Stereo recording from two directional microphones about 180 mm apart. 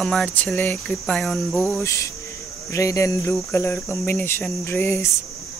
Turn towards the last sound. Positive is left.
turn(degrees=15)  # may be behind; listen again after turning